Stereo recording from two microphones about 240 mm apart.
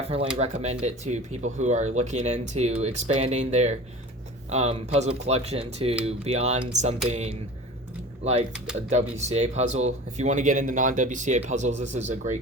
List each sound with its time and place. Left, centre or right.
0.3 s speech: right